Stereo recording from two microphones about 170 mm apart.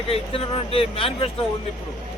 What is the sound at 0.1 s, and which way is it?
Speech, 35° left (ahead or behind).